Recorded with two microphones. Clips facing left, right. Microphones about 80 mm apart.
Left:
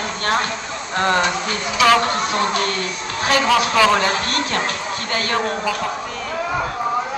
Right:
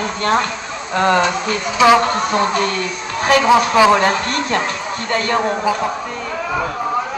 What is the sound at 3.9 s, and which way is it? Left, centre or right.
Speech, right.